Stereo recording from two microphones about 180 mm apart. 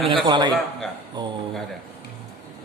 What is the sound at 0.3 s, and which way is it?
A man's voice, 25° right (ahead or behind).